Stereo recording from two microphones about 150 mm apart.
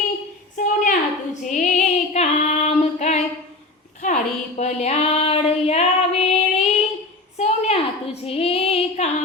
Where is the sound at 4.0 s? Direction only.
50° left (ahead or behind).